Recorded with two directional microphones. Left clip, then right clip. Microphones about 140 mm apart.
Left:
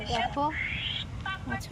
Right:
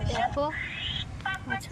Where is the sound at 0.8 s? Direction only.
90° right.